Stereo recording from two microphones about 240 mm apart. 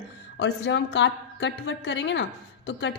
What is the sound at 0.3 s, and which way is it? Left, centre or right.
A woman's voice, left.